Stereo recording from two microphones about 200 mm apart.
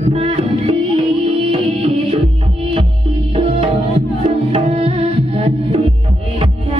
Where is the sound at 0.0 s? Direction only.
30° right (ahead or behind).